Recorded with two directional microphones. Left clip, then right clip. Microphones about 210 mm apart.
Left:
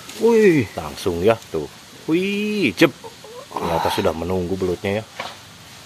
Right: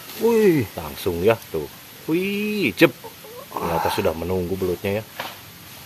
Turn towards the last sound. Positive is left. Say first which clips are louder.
# left 2 dB
turn(degrees=15)  # may be behind; listen again after turning